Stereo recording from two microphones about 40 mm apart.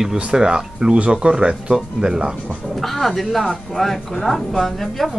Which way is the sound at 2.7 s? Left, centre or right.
Centre.